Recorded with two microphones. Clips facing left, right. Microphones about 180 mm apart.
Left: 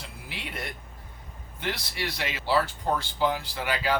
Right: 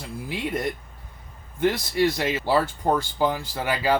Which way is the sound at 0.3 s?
45° right (ahead or behind).